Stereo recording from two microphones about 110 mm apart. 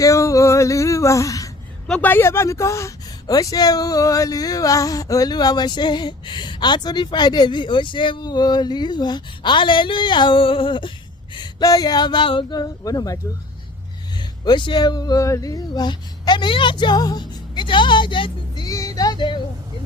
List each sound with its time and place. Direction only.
0.0 s a sound: 30° left (ahead or behind)
1.9 s a woman's voice: 15° left (ahead or behind); by 10.9 s 50° left (ahead or behind)
11.3 s a woman's voice: 35° left (ahead or behind)
14.2 s speech: 45° left (ahead or behind)
18.7 s music: 30° left (ahead or behind)